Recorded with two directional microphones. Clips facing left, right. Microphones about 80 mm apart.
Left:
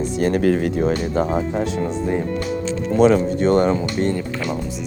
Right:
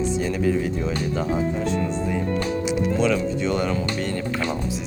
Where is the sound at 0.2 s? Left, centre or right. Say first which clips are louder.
Left 5 dB; left.